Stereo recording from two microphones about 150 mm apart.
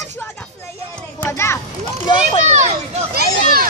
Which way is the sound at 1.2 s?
15° left (ahead or behind).